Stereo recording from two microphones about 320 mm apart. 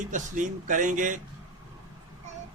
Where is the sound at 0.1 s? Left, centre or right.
Right.